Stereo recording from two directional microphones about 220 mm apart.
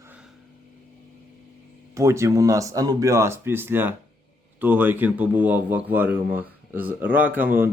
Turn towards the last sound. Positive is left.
turn(degrees=-10)  # may be behind; listen again after turning